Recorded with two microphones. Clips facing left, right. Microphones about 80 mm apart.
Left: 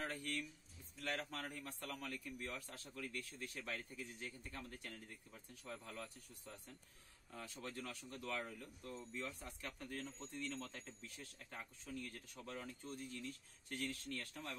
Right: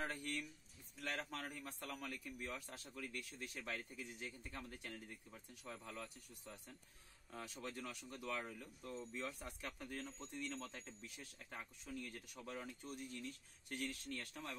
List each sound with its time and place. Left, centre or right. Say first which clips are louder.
0.1 s a sound: even; centre
1.4 s a man's voice: left 1 dB; centre
7.3 s speech: right 1 dB; centre
9.2 s a man's voice: right 1 dB; centre